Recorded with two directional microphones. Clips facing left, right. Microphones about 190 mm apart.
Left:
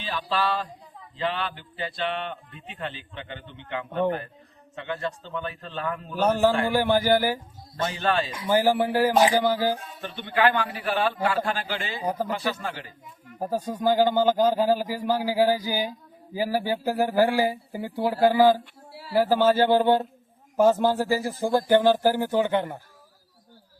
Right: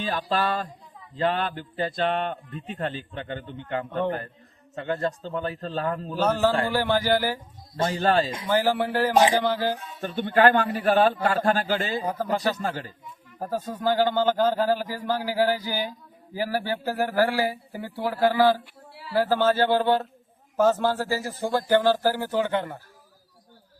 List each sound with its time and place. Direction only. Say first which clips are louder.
0.0 s a man's voice: right 2 dB; 45° right (ahead or behind)
6.1 s speech: left 2 dB; 15° left (ahead or behind)
7.8 s a man's voice: right 3 dB; 40° right (ahead or behind)
8.4 s speech: left 6 dB; 15° left (ahead or behind)
10.0 s a man's voice: right 5 dB; 45° right (ahead or behind)
12.0 s speech: left 1 dB; 15° left (ahead or behind)
12.3 s a man's voice: right 3 dB; 40° right (ahead or behind)
13.4 s speech: left 2 dB; 15° left (ahead or behind)